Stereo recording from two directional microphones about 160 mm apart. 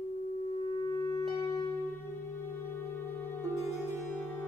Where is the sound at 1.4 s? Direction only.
25° left (ahead or behind).